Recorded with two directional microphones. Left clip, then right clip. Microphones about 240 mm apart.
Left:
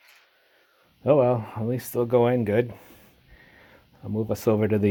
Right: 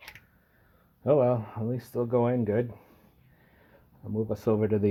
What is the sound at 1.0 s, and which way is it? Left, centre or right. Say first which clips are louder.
Speech: left 4 dB; left.